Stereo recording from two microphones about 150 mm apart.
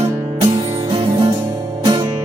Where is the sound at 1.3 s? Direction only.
20° right (ahead or behind).